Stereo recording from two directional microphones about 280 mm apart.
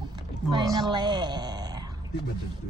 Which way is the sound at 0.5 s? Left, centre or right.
Centre.